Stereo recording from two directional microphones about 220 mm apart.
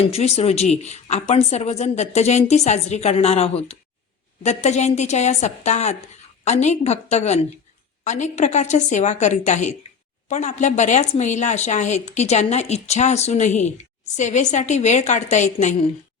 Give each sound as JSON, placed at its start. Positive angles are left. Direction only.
{"t": 0.0, "sound": "a woman's voice", "side_deg": 30}